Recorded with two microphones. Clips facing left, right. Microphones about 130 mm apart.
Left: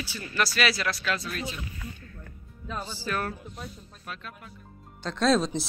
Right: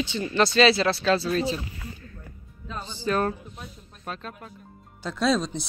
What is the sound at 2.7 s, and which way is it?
Speech, 5° left (ahead or behind).